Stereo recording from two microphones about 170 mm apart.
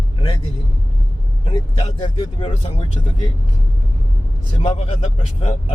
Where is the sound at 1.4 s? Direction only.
30° left (ahead or behind).